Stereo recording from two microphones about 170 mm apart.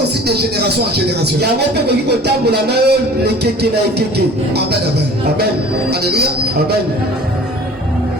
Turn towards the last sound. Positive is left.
turn(degrees=-70)  # may be behind; listen again after turning